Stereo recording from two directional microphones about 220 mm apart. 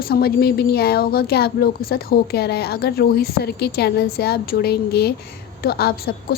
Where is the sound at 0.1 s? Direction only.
45° left (ahead or behind).